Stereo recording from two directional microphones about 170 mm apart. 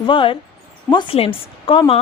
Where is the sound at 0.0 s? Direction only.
30° left (ahead or behind).